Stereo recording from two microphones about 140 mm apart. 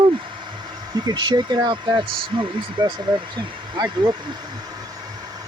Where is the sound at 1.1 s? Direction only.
30° right (ahead or behind).